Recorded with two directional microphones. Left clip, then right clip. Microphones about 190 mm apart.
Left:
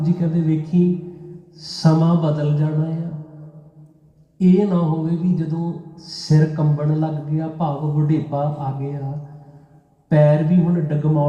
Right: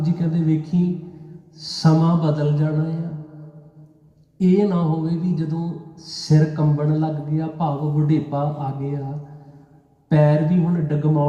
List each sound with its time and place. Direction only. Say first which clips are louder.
0.0 s a man's voice: left 2 dB; 20° right (ahead or behind)
4.4 s a man's voice: left 1 dB; 20° right (ahead or behind)
10.1 s a man's voice: left 2 dB; 20° right (ahead or behind)